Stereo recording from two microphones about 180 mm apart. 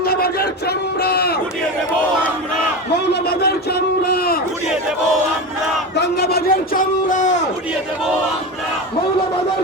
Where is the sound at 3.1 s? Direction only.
60° left (ahead or behind).